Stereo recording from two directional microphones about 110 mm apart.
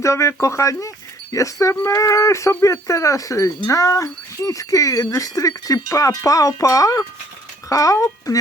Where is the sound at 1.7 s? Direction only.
25° left (ahead or behind).